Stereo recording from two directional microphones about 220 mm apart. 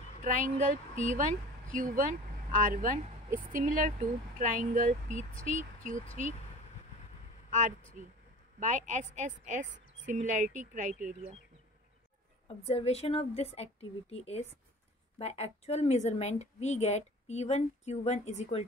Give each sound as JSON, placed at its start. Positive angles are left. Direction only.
{"t": 0.2, "sound": "a woman's voice", "side_deg": -35}
{"t": 8.5, "sound": "a woman's voice", "side_deg": -35}
{"t": 12.4, "sound": "a woman's voice", "side_deg": 25}